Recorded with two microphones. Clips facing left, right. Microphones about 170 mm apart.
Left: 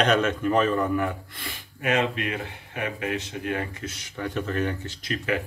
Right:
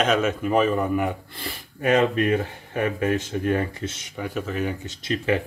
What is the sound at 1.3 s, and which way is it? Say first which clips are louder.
Speech: right 4 dB; 35° right (ahead or behind).